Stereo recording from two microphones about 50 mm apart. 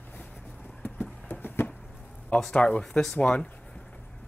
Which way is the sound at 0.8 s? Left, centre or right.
Left.